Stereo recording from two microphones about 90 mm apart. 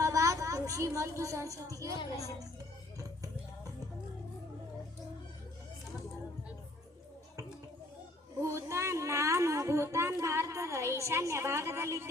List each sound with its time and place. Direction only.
0.0 s a woman's voice: 35° right (ahead or behind)
8.4 s speech: 35° right (ahead or behind)